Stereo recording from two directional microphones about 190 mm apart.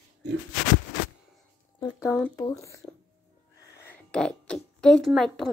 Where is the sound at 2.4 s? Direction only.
20° left (ahead or behind).